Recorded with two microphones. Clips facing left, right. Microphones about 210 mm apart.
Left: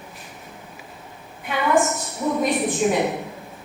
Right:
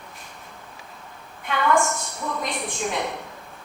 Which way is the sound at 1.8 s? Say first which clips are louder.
Left 4 dB; 20° left (ahead or behind).